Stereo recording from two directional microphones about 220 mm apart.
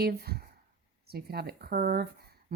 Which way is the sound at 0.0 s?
45° right (ahead or behind).